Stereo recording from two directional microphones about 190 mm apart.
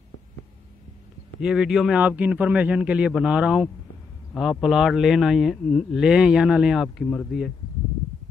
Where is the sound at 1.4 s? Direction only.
5° right (ahead or behind).